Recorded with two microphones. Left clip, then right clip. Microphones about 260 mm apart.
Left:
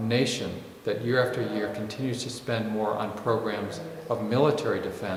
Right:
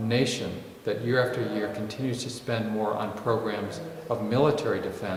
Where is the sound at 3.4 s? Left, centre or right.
Centre.